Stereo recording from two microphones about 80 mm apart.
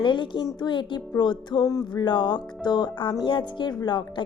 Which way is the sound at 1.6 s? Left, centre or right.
Left.